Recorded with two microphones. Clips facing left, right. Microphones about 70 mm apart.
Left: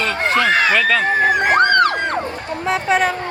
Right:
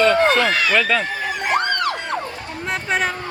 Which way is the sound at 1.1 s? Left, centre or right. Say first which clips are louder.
Left 7 dB; left.